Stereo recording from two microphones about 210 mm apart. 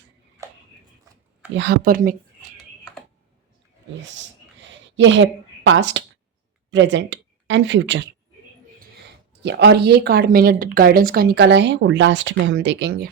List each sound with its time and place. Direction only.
0.4 s a sound: 15° right (ahead or behind)
1.5 s speech: 50° right (ahead or behind)
4.9 s a woman's voice: 60° right (ahead or behind)
9.4 s speech: 55° right (ahead or behind)